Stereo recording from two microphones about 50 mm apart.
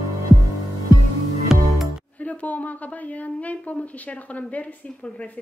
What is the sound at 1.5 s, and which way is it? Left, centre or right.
Music, centre.